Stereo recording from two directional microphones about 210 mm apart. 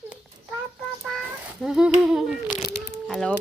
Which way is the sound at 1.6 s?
5° right (ahead or behind).